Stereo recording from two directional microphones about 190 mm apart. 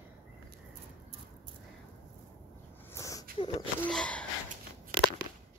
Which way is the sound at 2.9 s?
15° left (ahead or behind).